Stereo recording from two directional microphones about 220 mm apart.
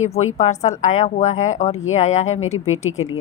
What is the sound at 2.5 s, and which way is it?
Speech, 70° left (ahead or behind).